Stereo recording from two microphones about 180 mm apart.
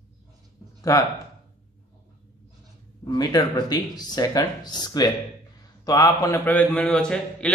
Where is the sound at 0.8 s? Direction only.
20° left (ahead or behind).